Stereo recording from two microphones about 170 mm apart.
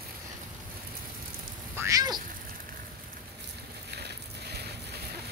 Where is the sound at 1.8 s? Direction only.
20° right (ahead or behind).